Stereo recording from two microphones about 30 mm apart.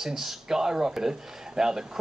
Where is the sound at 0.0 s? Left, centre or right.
Centre.